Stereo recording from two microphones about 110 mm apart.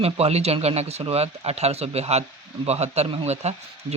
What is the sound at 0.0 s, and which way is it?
Speech, 70° right (ahead or behind).